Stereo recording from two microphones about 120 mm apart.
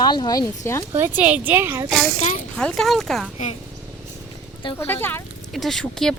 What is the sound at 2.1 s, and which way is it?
Speech, 85° left.